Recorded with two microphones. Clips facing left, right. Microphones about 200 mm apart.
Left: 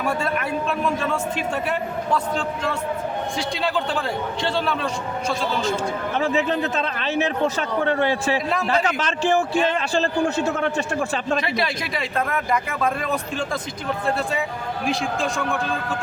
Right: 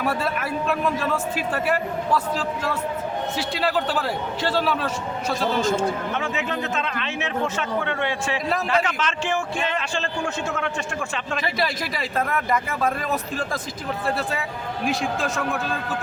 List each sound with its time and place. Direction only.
0.0 s a man's voice: 5° right (ahead or behind)
3.3 s a man's voice: 5° right (ahead or behind)
6.1 s speech: 35° left (ahead or behind)
11.4 s a man's voice: centre (ahead or behind)
14.8 s a man's voice: centre (ahead or behind)